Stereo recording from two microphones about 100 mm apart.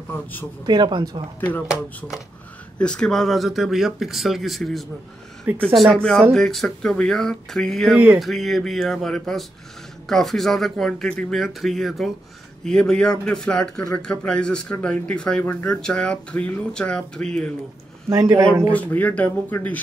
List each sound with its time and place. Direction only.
0.7 s speech: 45° right (ahead or behind)
2.8 s speech: 10° left (ahead or behind)
5.5 s speech: 15° right (ahead or behind)
5.9 s speech: 5° left (ahead or behind)
18.1 s speech: 40° right (ahead or behind)
18.7 s speech: 15° left (ahead or behind)